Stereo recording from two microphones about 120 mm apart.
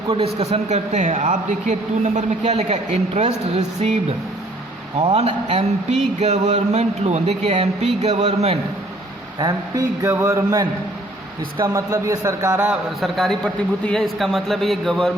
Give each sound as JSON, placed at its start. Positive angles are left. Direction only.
{"t": 0.1, "sound": "a man's voice", "side_deg": -60}
{"t": 4.9, "sound": "a man's voice", "side_deg": -60}
{"t": 9.4, "sound": "a man's voice", "side_deg": -30}
{"t": 11.7, "sound": "a man's voice", "side_deg": -25}
{"t": 13.0, "sound": "a man's voice", "side_deg": 0}